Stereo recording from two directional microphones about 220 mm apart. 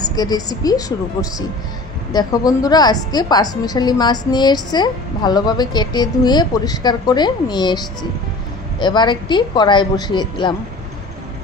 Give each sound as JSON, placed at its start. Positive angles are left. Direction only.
{"t": 0.0, "sound": "a woman's voice", "side_deg": 15}